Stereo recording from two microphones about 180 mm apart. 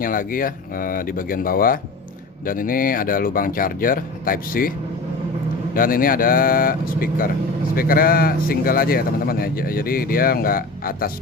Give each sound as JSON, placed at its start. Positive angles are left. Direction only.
{"t": 0.0, "sound": "speech", "side_deg": 50}
{"t": 5.7, "sound": "speech", "side_deg": 50}